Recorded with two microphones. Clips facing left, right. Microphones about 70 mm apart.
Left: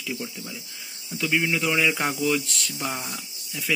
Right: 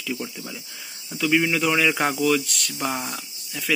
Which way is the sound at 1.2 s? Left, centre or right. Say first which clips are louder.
Right 3 dB; centre.